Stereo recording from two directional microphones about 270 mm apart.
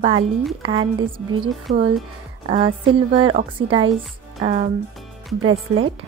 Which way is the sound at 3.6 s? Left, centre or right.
Right.